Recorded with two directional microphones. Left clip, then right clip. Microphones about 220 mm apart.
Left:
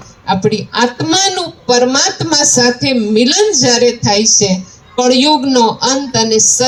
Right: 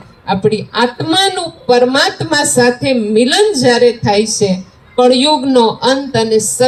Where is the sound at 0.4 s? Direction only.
20° left (ahead or behind).